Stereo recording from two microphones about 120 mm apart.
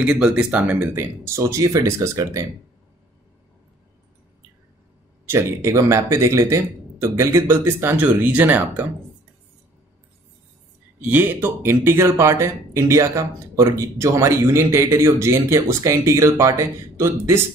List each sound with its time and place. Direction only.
0.0 s speech: 10° right (ahead or behind); by 2.4 s 25° right (ahead or behind)
5.3 s speech: 25° right (ahead or behind)
11.0 s speech: 15° right (ahead or behind)